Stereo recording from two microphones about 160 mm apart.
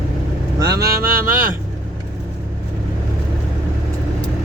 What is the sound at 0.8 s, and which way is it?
Speech, 65° right (ahead or behind).